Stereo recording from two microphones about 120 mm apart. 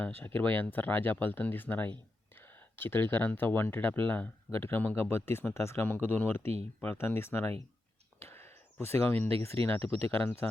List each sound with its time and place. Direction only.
0.2 s speech: 15° left (ahead or behind)
8.2 s a sound: 20° left (ahead or behind)
9.6 s speech: 50° right (ahead or behind)
10.1 s speech: 15° left (ahead or behind)